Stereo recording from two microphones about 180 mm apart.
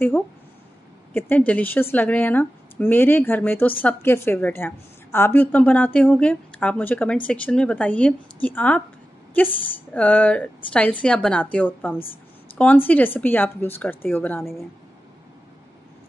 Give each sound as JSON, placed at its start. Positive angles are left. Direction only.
{"t": 1.1, "sound": "speech", "side_deg": 10}
{"t": 14.4, "sound": "speech", "side_deg": 0}